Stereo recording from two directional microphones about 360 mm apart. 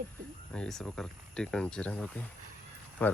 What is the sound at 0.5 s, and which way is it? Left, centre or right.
Speech, centre.